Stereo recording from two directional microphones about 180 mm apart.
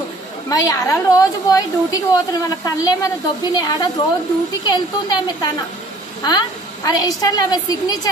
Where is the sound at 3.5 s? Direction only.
20° left (ahead or behind).